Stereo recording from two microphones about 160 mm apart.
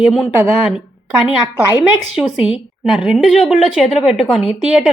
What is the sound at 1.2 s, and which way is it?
Speech, 25° left (ahead or behind).